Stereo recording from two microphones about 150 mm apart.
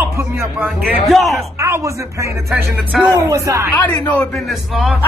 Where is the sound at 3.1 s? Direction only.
20° right (ahead or behind).